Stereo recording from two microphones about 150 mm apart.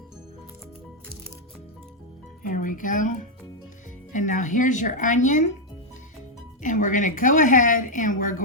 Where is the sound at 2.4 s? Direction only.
60° left (ahead or behind).